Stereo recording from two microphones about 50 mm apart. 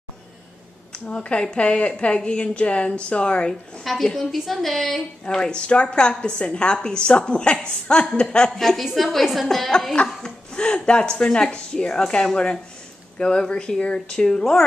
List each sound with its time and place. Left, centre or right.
0.9 s a woman's voice: left
3.8 s a woman's voice: centre
5.3 s a woman's voice: centre
8.5 s a woman's voice: centre